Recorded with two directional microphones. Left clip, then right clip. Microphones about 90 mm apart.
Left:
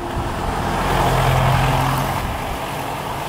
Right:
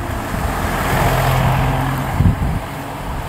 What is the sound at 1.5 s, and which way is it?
Vehicle, 25° left (ahead or behind).